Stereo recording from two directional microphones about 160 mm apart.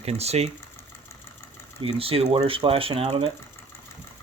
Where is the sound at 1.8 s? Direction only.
35° right (ahead or behind).